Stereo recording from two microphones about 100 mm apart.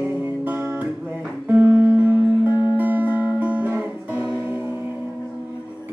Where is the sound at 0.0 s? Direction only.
15° right (ahead or behind).